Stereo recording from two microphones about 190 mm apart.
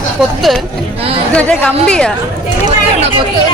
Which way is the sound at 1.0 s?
30° right (ahead or behind).